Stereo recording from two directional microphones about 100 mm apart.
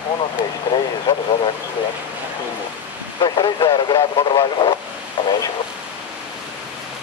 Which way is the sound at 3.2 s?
55° left (ahead or behind).